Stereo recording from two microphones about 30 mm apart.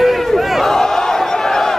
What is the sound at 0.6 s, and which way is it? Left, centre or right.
Battle cry, centre.